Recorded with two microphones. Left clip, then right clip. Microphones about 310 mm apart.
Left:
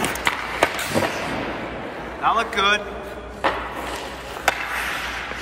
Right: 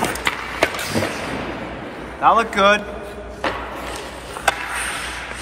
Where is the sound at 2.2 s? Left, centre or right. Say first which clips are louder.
Right 5 dB; centre.